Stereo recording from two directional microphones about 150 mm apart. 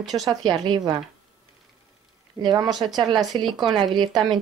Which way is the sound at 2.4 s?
30° right (ahead or behind).